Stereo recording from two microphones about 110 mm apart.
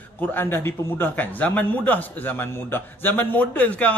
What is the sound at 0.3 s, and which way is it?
A man's voice, 20° left (ahead or behind).